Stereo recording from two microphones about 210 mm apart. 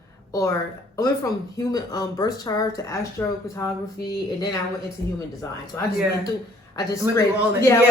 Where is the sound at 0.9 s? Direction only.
15° left (ahead or behind).